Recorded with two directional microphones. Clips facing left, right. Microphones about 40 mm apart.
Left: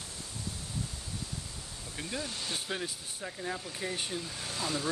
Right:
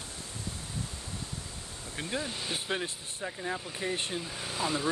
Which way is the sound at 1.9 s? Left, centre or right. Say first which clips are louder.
Right 3 dB; right.